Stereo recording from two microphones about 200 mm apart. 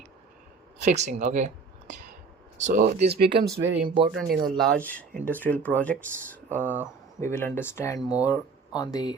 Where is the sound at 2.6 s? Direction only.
35° right (ahead or behind).